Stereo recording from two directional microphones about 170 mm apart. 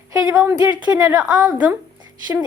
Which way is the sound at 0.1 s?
20° right (ahead or behind).